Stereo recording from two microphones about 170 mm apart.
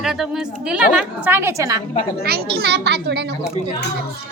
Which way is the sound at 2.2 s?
65° right (ahead or behind).